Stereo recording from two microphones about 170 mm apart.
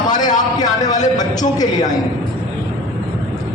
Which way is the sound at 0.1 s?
25° left (ahead or behind).